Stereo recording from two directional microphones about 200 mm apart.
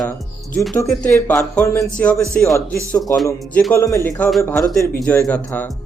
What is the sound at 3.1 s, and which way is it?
Speech, 10° left (ahead or behind).